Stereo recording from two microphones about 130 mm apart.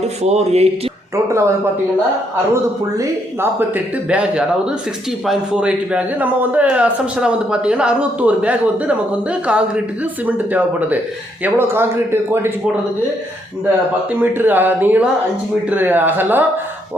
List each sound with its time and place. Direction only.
0.2 s speech: 55° right (ahead or behind)
1.1 s speech: 20° right (ahead or behind)
4.1 s a man's voice: 5° right (ahead or behind)
14.1 s a man's voice: 15° right (ahead or behind)